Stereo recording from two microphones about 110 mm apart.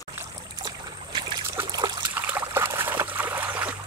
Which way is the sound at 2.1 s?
20° right (ahead or behind).